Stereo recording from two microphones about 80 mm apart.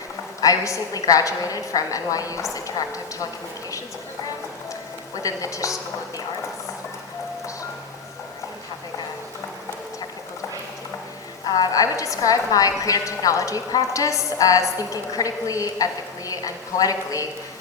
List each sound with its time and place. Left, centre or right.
0.4 s a woman's voice: left
5.1 s a woman's voice: left
11.4 s a woman's voice: left